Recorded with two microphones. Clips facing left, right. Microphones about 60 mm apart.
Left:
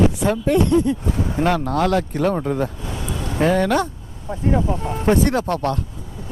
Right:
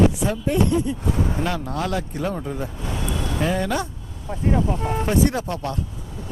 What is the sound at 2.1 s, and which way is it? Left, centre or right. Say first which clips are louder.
Speech: left 7 dB; left.